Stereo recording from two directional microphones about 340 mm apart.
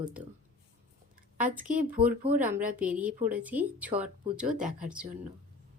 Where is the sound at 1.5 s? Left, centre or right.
Right.